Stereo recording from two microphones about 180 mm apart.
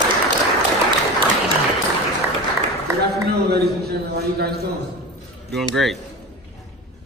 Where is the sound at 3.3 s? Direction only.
65° right (ahead or behind).